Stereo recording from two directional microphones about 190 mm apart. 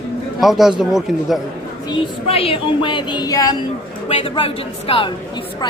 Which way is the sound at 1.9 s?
30° left (ahead or behind).